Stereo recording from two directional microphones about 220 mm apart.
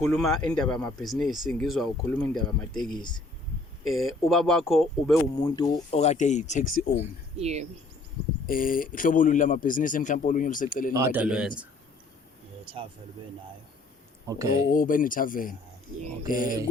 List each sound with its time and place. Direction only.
0.0 s speech: 5° left (ahead or behind)
2.9 s speech: 20° left (ahead or behind)
3.8 s speech: centre (ahead or behind)
5.4 s speech: 20° left (ahead or behind)
6.0 s speech: 30° left (ahead or behind)
7.3 s speech: 30° right (ahead or behind)
8.4 s speech: 40° left (ahead or behind)
10.9 s speech: 10° right (ahead or behind)
12.6 s speech: 25° right (ahead or behind)
14.3 s speech: 15° right (ahead or behind)
14.7 s speech: 40° left (ahead or behind)